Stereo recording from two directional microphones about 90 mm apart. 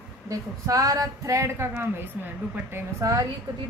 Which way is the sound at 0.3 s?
40° right (ahead or behind).